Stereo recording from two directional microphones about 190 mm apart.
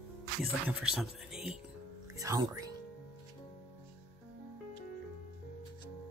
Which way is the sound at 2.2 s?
15° right (ahead or behind).